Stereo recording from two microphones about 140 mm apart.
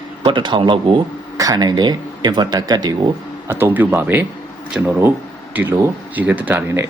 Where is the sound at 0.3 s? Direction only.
35° right (ahead or behind).